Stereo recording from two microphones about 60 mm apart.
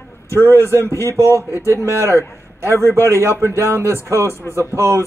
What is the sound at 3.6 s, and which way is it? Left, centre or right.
Speech, right.